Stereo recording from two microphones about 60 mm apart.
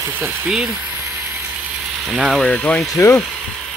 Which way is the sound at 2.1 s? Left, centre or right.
Centre.